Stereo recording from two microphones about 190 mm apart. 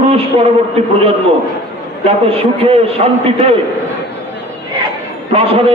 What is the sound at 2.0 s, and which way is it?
Speech, 30° right (ahead or behind).